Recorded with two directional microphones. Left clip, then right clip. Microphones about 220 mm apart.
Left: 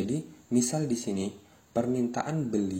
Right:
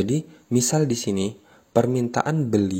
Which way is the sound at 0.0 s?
50° right (ahead or behind).